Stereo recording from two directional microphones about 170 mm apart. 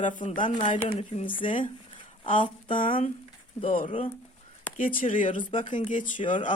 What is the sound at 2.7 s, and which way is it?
Speech, 50° left (ahead or behind).